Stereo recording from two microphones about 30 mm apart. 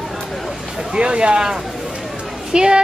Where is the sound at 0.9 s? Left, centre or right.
Right.